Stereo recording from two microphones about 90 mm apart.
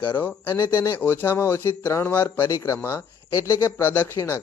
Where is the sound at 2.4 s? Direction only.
35° left (ahead or behind).